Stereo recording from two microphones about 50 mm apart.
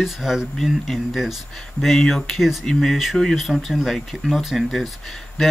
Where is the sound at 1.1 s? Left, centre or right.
Centre.